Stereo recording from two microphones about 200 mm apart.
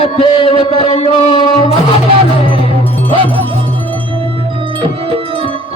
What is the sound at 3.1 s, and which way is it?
Music, 25° right (ahead or behind).